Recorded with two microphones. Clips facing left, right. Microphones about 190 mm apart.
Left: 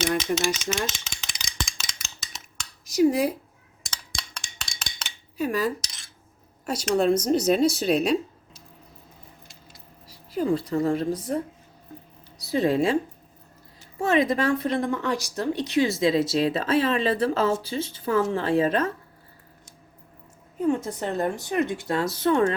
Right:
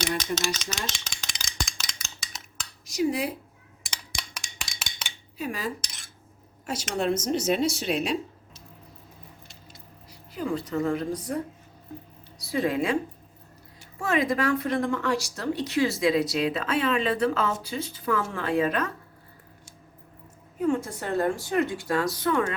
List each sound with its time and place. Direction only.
0.2 s rattle: 10° left (ahead or behind)
2.9 s speech: 45° left (ahead or behind)
3.8 s a sound: 15° right (ahead or behind)
5.4 s speech: 45° left (ahead or behind)
10.1 s a woman's voice: 35° left (ahead or behind)
12.5 s speech: 30° left (ahead or behind)
14.0 s speech: 25° left (ahead or behind)
20.6 s speech: 20° left (ahead or behind)